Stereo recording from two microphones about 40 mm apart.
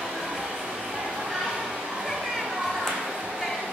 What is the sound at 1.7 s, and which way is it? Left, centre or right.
Children playing, centre.